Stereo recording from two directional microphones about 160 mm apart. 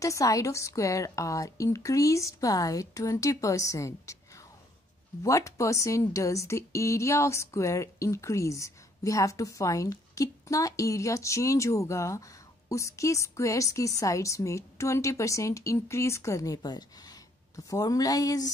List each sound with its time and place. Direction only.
0.0 s speech: 20° left (ahead or behind)